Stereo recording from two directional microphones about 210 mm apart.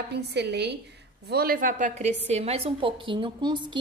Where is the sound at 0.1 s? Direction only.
55° right (ahead or behind).